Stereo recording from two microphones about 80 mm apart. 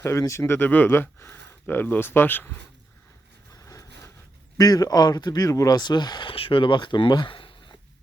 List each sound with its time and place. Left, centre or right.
0.0 s speech: left
3.5 s vehicle: left
4.5 s speech: left